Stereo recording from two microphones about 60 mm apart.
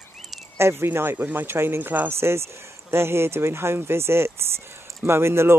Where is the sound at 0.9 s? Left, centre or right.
Right.